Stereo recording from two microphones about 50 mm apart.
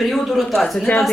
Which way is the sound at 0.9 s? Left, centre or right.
Left.